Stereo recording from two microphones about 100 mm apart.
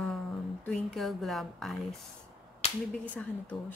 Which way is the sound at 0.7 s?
10° left (ahead or behind).